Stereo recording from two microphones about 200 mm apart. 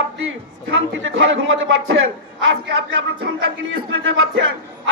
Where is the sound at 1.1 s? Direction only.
75° right (ahead or behind).